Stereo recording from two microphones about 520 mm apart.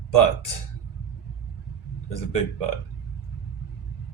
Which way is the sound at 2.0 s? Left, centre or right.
Left.